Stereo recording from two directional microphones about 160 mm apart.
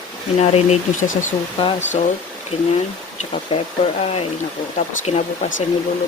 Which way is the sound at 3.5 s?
30° left (ahead or behind).